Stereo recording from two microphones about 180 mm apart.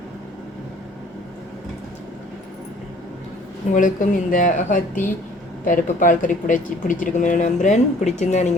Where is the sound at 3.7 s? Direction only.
45° left (ahead or behind).